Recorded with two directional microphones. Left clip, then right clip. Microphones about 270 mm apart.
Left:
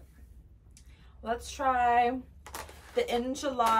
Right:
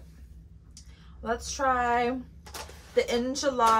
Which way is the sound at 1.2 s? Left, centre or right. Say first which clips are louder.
Right 3 dB; centre.